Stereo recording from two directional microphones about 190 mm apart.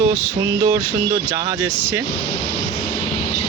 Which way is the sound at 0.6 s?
15° right (ahead or behind).